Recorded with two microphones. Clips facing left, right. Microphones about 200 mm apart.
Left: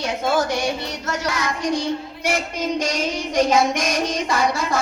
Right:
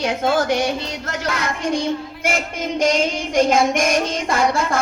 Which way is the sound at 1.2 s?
55° right (ahead or behind).